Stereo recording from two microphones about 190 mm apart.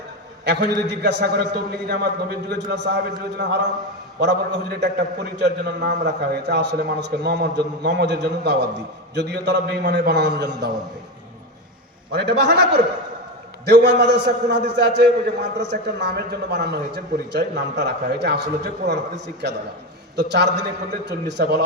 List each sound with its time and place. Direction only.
0.4 s a man's voice: 65° right (ahead or behind)
12.1 s a man's voice: 60° right (ahead or behind)